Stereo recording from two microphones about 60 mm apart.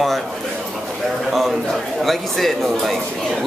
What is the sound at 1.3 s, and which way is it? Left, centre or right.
Speech, centre.